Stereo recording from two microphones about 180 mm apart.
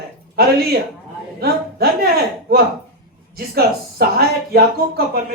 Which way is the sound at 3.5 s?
60° right (ahead or behind).